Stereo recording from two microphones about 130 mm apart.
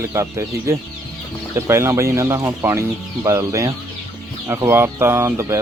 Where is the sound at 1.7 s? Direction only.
20° right (ahead or behind).